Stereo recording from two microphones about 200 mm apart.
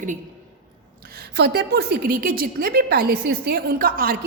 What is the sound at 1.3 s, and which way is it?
A woman's voice, 55° right (ahead or behind).